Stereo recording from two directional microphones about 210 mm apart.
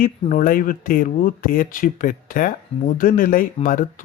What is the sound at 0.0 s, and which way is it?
Speech, 40° left (ahead or behind).